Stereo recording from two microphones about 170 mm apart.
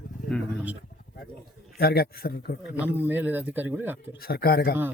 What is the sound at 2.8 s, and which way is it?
Speech, 10° right (ahead or behind).